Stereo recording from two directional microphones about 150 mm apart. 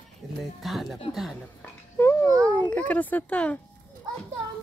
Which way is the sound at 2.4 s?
10° left (ahead or behind).